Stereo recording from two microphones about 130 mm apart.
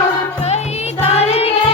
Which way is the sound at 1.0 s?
50° left (ahead or behind).